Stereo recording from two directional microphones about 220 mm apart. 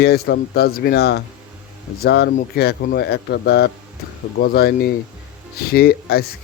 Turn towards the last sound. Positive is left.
turn(degrees=45)  # may be behind; listen again after turning